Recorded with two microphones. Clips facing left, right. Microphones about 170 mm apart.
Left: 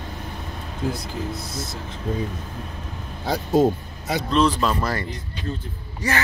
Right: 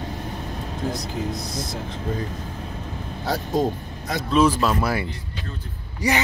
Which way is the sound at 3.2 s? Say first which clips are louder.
Left 4 dB; centre (ahead or behind).